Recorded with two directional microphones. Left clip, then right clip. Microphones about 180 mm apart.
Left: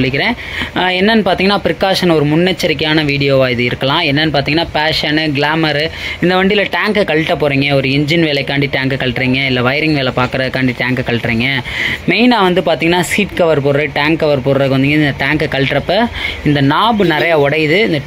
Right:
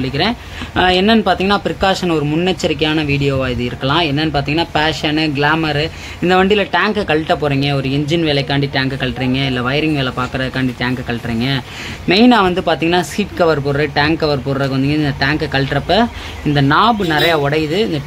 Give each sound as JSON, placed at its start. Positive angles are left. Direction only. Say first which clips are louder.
{"t": 0.7, "sound": "speech", "louder": "even", "side_deg": 15}
{"t": 12.1, "sound": "speech", "louder": "right 1 dB", "side_deg": 15}